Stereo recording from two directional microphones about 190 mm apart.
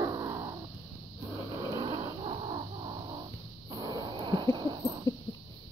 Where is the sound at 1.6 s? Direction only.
20° right (ahead or behind).